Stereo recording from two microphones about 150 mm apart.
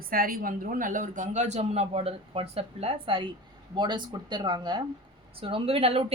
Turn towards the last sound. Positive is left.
turn(degrees=-40)  # may be behind; listen again after turning